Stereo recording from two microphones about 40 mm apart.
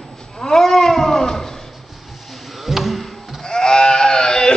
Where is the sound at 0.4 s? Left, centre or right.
Centre.